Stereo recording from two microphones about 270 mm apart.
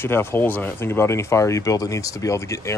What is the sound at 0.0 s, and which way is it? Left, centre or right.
A man's voice, centre.